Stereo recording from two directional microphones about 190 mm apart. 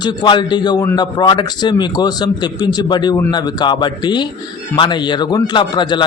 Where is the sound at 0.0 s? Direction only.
25° left (ahead or behind).